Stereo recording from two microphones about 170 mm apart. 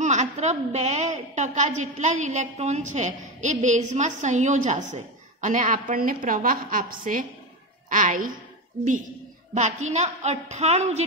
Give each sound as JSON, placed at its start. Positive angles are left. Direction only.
{"t": 0.0, "sound": "a woman's voice", "side_deg": -45}
{"t": 9.5, "sound": "a woman's voice", "side_deg": -45}